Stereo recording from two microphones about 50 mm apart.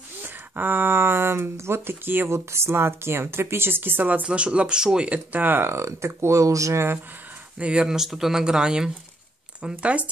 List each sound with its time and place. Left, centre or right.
0.2 s speech: right
2.3 s speech: right
4.2 s speech: right
5.3 s speech: right
5.7 s speech: right
7.5 s speech: right
7.9 s speech: centre; by 10.0 s right